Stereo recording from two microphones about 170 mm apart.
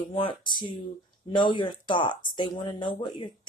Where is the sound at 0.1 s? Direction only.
30° left (ahead or behind).